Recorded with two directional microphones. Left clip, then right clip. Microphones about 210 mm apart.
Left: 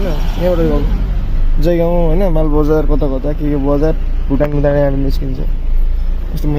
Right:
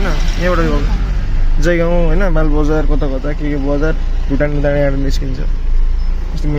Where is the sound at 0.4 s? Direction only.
15° left (ahead or behind).